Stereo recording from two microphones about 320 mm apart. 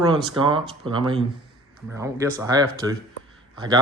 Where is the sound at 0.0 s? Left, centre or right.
Centre.